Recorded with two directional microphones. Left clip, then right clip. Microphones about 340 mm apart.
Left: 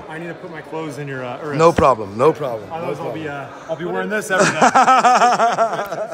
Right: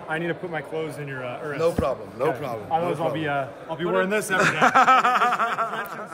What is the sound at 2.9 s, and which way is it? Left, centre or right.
Speech, right.